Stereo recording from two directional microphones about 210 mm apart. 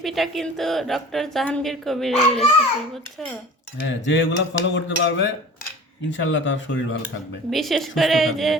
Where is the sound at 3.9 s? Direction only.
60° left (ahead or behind).